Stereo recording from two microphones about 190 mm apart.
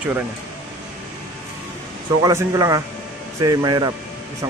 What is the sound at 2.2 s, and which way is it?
Speech, 15° right (ahead or behind).